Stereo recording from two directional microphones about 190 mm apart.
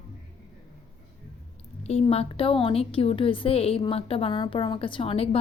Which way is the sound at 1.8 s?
35° left (ahead or behind).